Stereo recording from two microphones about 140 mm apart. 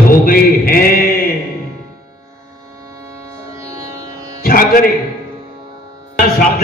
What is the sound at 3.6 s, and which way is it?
Music, 25° right (ahead or behind).